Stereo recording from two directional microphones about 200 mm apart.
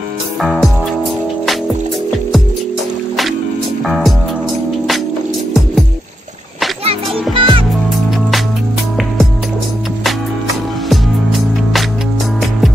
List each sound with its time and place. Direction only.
0.4 s music: centre (ahead or behind)
3.8 s music: centre (ahead or behind)
6.8 s music: 30° right (ahead or behind)
10.9 s music: centre (ahead or behind)